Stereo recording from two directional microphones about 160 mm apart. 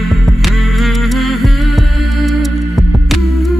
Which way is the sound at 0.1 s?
Centre (ahead or behind).